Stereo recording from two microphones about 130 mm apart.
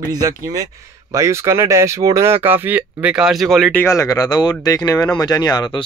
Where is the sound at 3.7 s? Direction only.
15° left (ahead or behind).